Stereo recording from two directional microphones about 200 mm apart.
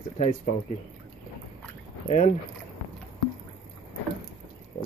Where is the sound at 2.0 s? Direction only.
35° left (ahead or behind).